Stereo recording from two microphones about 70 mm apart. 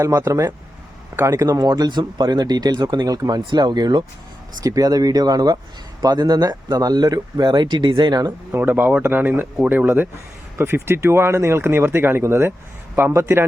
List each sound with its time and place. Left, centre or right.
0.2 s speech: right
1.6 s speech: right
4.6 s speech: right
8.5 s speech: right